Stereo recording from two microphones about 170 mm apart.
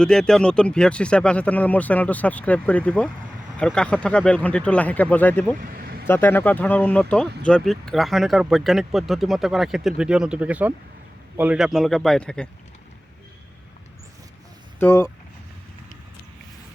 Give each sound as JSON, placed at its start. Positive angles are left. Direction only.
{"t": 0.0, "sound": "speech", "side_deg": 5}
{"t": 5.5, "sound": "a sound", "side_deg": -55}
{"t": 6.1, "sound": "speech", "side_deg": 15}
{"t": 14.8, "sound": "speech", "side_deg": 15}